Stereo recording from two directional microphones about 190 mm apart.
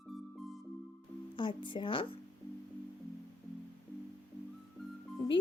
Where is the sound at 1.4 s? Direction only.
25° left (ahead or behind).